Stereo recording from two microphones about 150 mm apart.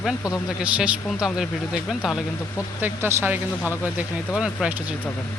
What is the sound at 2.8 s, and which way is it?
Speech, 10° right (ahead or behind).